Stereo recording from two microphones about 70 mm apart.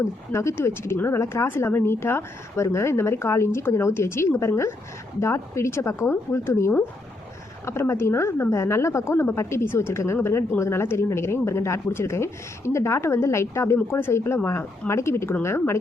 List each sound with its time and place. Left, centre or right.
0.3 s speech: left